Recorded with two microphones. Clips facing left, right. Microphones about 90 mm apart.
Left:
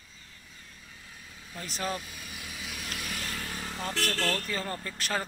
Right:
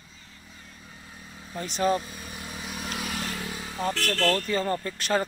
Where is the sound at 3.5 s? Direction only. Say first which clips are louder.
Right 6 dB; 5° right (ahead or behind).